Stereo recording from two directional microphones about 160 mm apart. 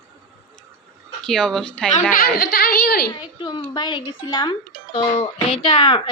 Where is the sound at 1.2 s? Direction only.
5° left (ahead or behind).